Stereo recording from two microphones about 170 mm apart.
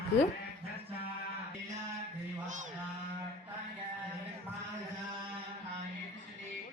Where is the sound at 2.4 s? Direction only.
45° right (ahead or behind).